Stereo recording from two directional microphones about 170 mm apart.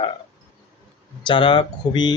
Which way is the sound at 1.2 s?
30° left (ahead or behind).